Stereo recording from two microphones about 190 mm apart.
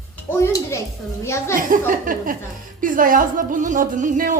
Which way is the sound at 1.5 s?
45° right (ahead or behind).